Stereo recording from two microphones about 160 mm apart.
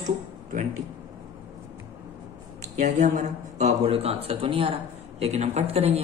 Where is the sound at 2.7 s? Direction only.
50° right (ahead or behind).